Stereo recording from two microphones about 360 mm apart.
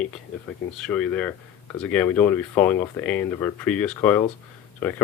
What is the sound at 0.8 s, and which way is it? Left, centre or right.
Speech, centre.